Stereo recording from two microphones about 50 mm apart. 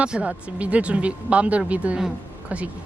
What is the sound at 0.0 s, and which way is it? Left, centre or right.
Speech, right.